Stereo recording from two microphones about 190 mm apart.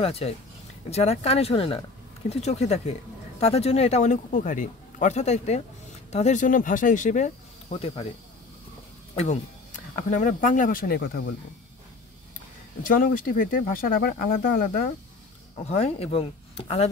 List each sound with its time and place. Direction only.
0.0 s speech: 30° left (ahead or behind)
9.1 s speech: 35° left (ahead or behind)
11.0 s speech: 60° left (ahead or behind)
12.8 s speech: 45° left (ahead or behind)
15.6 s speech: 35° left (ahead or behind)